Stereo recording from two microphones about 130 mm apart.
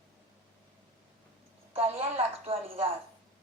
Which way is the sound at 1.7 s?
45° right (ahead or behind).